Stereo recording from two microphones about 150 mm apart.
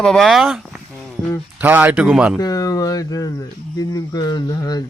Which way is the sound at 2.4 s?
25° left (ahead or behind).